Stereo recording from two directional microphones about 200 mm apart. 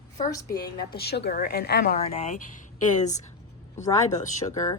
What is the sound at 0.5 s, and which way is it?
A woman's voice, 50° left (ahead or behind).